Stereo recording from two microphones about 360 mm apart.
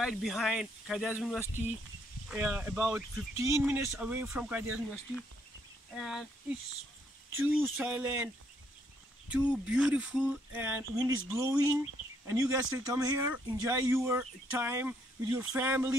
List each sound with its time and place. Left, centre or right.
0.0 s speech: centre
5.9 s speech: centre
7.3 s speech: centre
9.3 s speech: centre